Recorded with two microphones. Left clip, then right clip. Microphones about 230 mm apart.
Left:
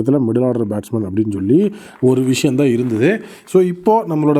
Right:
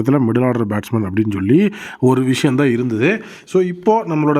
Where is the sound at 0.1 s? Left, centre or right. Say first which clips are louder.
Even; right.